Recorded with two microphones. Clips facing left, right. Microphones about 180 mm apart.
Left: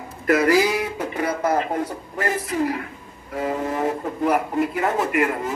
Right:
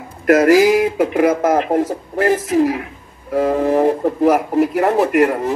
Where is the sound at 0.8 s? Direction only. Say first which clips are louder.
Right 11 dB; 90° right.